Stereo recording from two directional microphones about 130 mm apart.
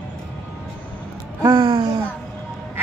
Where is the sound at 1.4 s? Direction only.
30° right (ahead or behind).